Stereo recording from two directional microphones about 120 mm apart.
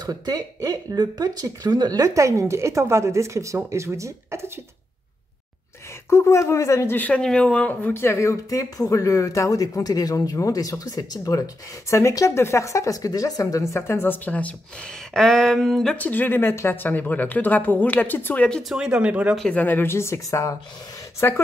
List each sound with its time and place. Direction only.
0.0 s speech: 35° right (ahead or behind)
6.0 s speech: 25° left (ahead or behind)
18.7 s speech: 5° right (ahead or behind)
19.3 s speech: 10° left (ahead or behind)